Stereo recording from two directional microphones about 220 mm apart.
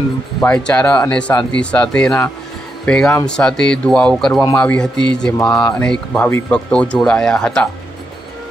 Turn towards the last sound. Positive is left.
turn(degrees=5)  # may be behind; listen again after turning